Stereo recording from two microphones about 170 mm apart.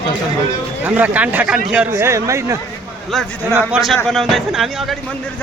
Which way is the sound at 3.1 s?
Centre (ahead or behind).